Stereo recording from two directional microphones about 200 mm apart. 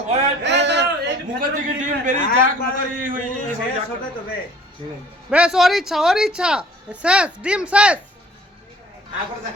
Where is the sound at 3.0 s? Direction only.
45° right (ahead or behind).